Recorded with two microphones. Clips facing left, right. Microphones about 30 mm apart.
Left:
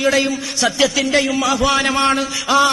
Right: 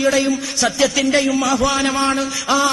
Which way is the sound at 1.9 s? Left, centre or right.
Left.